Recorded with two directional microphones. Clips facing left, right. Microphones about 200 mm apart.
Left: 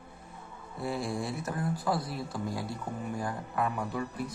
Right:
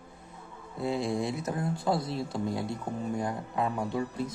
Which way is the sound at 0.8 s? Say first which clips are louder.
Right 4 dB; 20° right (ahead or behind).